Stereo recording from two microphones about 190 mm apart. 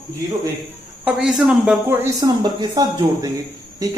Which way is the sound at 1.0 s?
5° right (ahead or behind).